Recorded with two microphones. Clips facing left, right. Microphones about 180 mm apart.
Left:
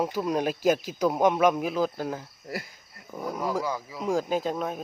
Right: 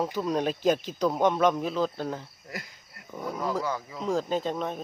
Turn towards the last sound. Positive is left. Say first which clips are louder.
# left 1 dB
turn(degrees=5)  # may be behind; listen again after turning